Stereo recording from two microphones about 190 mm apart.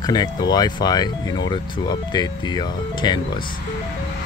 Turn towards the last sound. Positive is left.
turn(degrees=20)  # may be behind; listen again after turning